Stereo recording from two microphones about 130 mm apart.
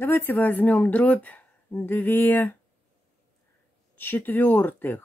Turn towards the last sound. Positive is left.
turn(degrees=15)  # may be behind; listen again after turning